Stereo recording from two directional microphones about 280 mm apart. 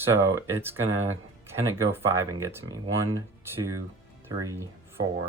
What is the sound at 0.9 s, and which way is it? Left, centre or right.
Speech, right.